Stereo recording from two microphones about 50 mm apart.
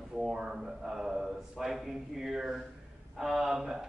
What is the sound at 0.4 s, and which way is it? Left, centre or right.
A man's voice, centre.